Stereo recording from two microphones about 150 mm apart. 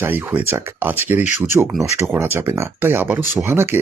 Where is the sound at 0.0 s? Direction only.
15° right (ahead or behind).